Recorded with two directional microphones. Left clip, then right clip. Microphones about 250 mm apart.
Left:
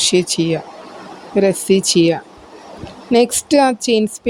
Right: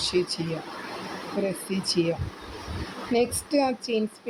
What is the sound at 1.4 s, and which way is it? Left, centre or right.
A woman's voice, left.